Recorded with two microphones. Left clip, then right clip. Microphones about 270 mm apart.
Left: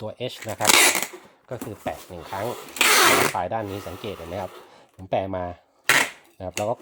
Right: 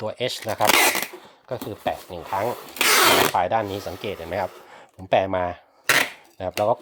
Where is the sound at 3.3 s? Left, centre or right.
Right.